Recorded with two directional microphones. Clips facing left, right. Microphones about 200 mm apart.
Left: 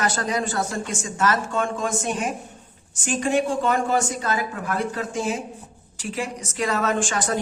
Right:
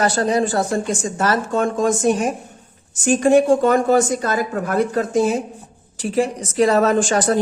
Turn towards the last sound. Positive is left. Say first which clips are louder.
# right 7 dB
turn(degrees=-35)  # may be behind; listen again after turning